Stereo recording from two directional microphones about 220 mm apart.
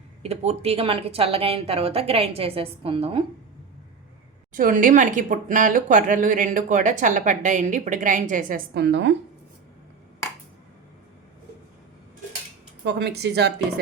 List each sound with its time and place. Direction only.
0.2 s speech: 30° right (ahead or behind)
4.5 s speech: 40° right (ahead or behind)
12.8 s a woman's voice: 50° right (ahead or behind)